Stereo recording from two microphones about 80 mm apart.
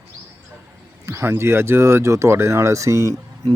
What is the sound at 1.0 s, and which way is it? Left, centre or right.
Speech, right.